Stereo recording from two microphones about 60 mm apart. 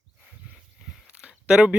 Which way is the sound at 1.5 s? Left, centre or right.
Centre.